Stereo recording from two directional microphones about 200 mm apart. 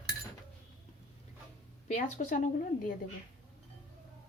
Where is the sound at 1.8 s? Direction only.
35° left (ahead or behind).